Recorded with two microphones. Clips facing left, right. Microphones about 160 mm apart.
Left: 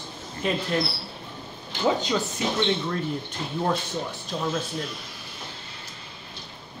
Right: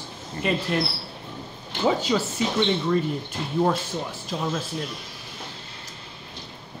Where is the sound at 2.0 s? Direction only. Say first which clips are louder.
Right 2 dB; 5° right (ahead or behind).